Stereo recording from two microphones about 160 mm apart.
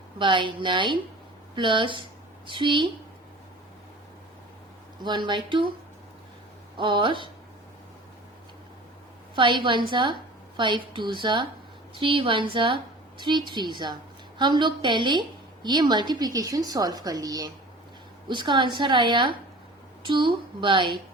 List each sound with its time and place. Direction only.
0.2 s a woman's voice: 30° right (ahead or behind)
5.0 s a woman's voice: 30° right (ahead or behind)
6.7 s a woman's voice: 30° right (ahead or behind)
9.3 s a woman's voice: 30° right (ahead or behind)